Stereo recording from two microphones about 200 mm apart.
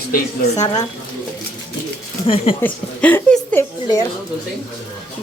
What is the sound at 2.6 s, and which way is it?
Speech, 10° left (ahead or behind).